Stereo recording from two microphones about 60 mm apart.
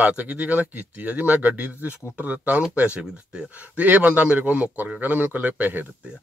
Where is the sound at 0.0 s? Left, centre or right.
Right.